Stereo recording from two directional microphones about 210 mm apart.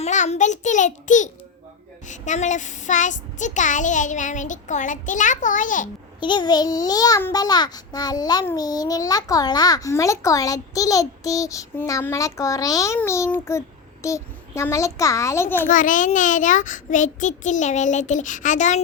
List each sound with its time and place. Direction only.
0.0 s speech: 35° left (ahead or behind)
6.1 s a child's voice: 20° left (ahead or behind)
15.7 s speech: 40° left (ahead or behind)